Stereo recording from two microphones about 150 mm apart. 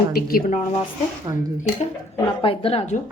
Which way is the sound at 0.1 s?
85° left.